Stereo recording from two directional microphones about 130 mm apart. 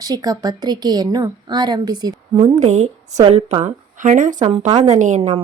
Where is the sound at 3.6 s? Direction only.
80° right.